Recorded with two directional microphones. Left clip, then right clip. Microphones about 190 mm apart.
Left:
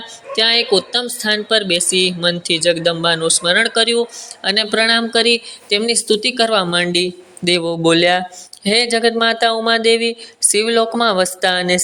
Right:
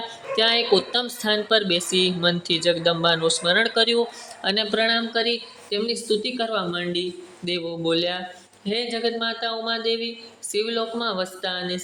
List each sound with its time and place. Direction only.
0.3 s speech: 5° left (ahead or behind); by 11.8 s 30° left (ahead or behind)